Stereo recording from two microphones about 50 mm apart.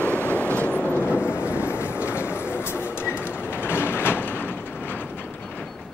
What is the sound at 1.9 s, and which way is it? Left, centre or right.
Train, right.